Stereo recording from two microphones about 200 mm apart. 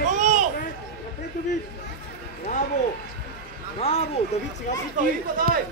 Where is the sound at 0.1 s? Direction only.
35° right (ahead or behind).